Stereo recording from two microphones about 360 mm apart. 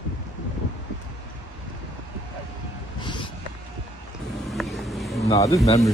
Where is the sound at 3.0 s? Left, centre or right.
Centre.